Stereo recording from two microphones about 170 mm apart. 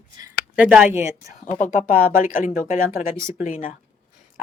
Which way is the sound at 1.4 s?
50° left (ahead or behind).